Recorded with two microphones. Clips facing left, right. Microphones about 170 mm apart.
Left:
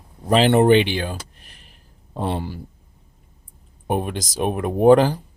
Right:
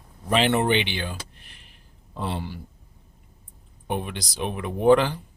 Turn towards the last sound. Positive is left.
turn(degrees=40)  # may be behind; listen again after turning